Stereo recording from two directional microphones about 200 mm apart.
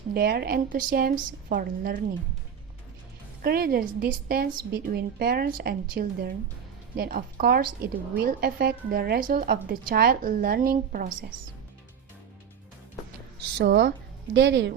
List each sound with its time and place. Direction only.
0.1 s a woman's voice: 50° right (ahead or behind)
3.4 s a woman's voice: 50° right (ahead or behind)
13.6 s a woman's voice: 50° right (ahead or behind)
14.3 s speech: 60° right (ahead or behind)